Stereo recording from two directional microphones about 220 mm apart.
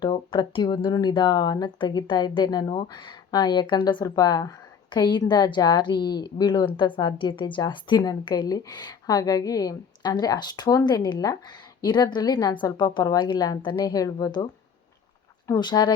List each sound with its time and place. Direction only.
0.0 s a woman's voice: 20° left (ahead or behind)
15.4 s speech: 15° left (ahead or behind)